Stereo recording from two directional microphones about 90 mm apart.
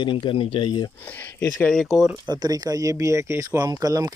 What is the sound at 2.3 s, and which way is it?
Speech, 45° right (ahead or behind).